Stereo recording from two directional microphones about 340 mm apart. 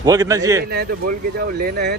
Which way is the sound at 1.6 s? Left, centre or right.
Right.